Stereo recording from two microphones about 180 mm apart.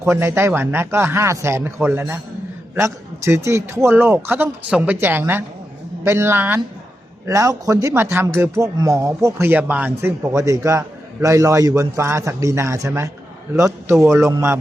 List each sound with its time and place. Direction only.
0.0 s speech: 15° right (ahead or behind)